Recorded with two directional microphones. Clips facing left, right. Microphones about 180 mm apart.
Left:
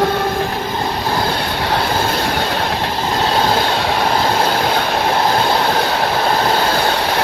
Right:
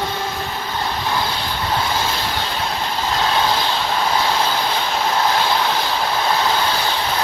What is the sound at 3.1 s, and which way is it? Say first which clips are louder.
Train: left 3 dB; 40° left (ahead or behind).